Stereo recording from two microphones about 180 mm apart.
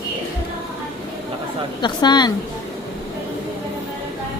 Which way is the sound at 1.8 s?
25° left (ahead or behind).